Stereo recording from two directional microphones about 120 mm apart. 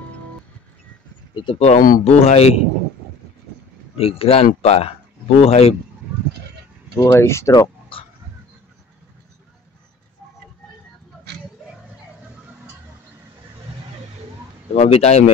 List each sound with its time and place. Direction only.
1.3 s speech: 45° left (ahead or behind)
1.6 s a man's voice: 65° left (ahead or behind)
4.0 s a man's voice: 55° left (ahead or behind)
7.0 s speech: 20° left (ahead or behind)
14.7 s a man's voice: 60° left (ahead or behind)